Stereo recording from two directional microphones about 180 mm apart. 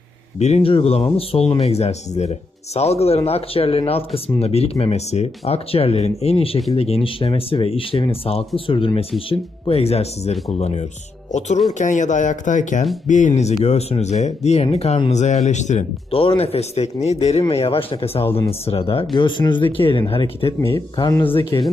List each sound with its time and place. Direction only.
0.3 s speech: 35° left (ahead or behind)
18.3 s speech: 15° left (ahead or behind)
18.6 s speech: 35° left (ahead or behind)
20.6 s speech: 15° left (ahead or behind)
21.2 s speech: 10° left (ahead or behind)